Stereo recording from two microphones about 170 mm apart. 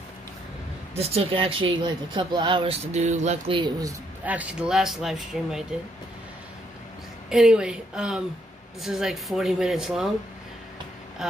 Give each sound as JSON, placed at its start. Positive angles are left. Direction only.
{"t": 0.9, "sound": "speech", "side_deg": -35}
{"t": 4.3, "sound": "speech", "side_deg": -5}
{"t": 7.2, "sound": "speech", "side_deg": -5}